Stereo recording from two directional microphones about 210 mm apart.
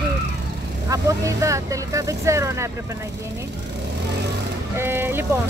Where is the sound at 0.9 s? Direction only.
15° right (ahead or behind).